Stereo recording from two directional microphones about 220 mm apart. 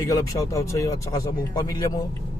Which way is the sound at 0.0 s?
15° left (ahead or behind).